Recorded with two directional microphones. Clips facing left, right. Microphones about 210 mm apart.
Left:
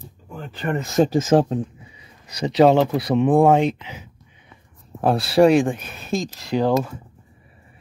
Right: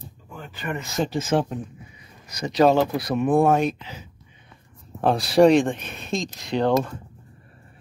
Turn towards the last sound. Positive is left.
turn(degrees=5)  # may be behind; listen again after turning